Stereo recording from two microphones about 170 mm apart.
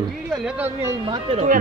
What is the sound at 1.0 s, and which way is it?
Speech, 30° right (ahead or behind).